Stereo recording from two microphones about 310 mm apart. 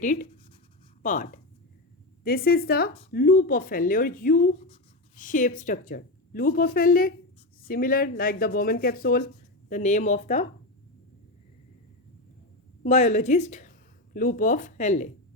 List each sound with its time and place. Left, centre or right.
0.0 s speech: left
12.8 s speech: left